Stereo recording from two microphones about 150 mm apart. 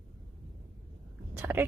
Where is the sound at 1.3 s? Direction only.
15° right (ahead or behind).